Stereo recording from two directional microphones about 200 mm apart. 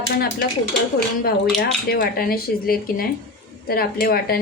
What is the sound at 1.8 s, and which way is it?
Speech, 45° left (ahead or behind).